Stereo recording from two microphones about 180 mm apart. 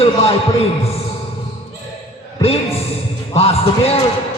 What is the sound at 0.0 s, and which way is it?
Speech, 35° left (ahead or behind).